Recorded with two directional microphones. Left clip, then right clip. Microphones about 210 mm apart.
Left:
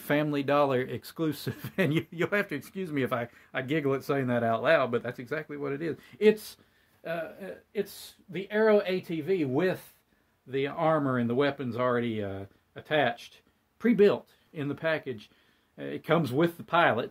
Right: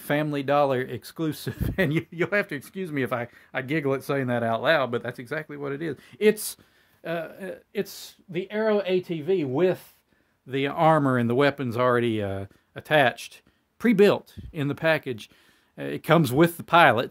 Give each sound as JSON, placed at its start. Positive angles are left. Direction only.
{"t": 0.0, "sound": "speech", "side_deg": -15}
{"t": 7.0, "sound": "speech", "side_deg": -55}
{"t": 10.5, "sound": "speech", "side_deg": -55}